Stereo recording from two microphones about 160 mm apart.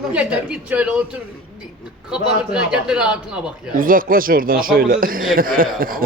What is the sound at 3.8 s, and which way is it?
A man's voice, 60° right (ahead or behind).